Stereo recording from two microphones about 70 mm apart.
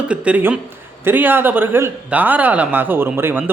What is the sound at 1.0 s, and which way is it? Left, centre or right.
A man's voice, right.